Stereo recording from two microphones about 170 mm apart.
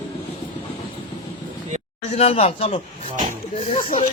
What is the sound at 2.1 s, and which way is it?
Speech, 35° left (ahead or behind).